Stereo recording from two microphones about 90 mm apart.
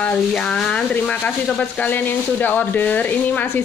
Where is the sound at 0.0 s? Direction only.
10° left (ahead or behind).